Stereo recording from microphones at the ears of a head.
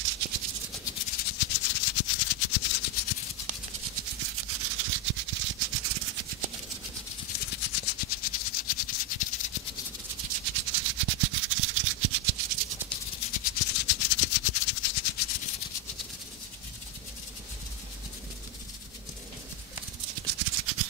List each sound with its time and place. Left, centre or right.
0.0 s maraca: right
0.8 s maraca: left
3.4 s rub: right
7.2 s maraca: left
10.1 s maraca: right
12.9 s maraca: left
20.0 s music: right